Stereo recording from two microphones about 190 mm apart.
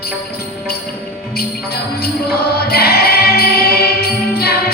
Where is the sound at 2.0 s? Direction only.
55° left (ahead or behind).